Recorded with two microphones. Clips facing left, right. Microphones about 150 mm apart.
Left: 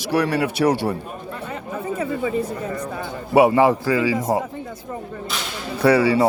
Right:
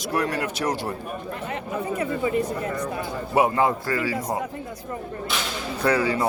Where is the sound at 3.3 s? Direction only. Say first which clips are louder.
Left 6 dB; 75° left (ahead or behind).